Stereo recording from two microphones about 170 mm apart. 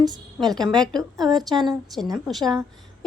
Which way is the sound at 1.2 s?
25° right (ahead or behind).